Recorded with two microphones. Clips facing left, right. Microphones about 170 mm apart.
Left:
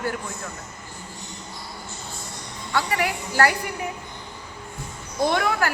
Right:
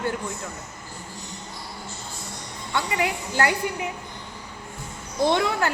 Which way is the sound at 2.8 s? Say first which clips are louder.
Left 1 dB; 20° right (ahead or behind).